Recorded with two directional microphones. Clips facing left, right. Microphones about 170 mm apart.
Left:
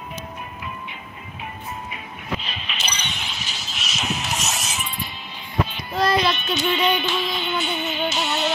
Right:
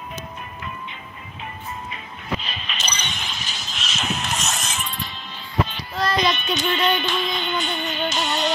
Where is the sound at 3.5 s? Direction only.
5° left (ahead or behind).